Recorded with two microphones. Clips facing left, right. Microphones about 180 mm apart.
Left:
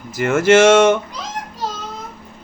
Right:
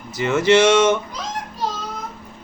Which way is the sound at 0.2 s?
50° left (ahead or behind).